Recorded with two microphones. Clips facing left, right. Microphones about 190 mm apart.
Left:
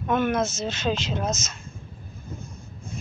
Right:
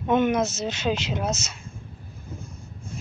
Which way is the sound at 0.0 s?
20° right (ahead or behind).